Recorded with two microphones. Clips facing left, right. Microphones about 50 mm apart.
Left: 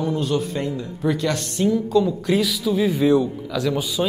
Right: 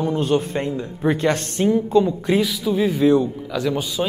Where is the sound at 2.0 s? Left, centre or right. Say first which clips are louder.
Right 1 dB; centre.